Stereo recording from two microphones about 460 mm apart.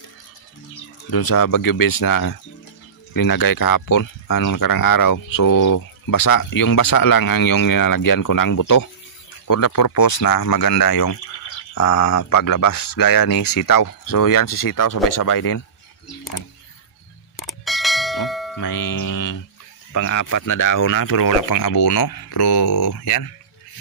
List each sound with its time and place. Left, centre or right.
0.7 s speech: left
17.4 s bell: centre
18.6 s music: left
19.9 s speech: left